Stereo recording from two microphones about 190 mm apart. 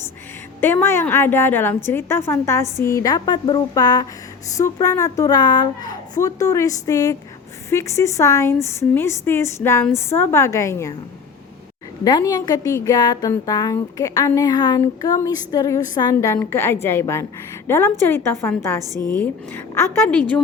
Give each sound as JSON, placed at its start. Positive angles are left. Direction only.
{"t": 0.6, "sound": "a woman's voice", "side_deg": 10}
{"t": 12.0, "sound": "a woman's voice", "side_deg": 20}